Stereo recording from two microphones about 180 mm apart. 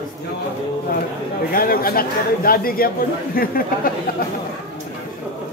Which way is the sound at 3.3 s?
55° left (ahead or behind).